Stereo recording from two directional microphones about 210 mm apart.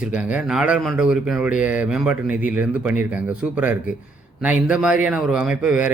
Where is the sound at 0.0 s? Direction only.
5° right (ahead or behind).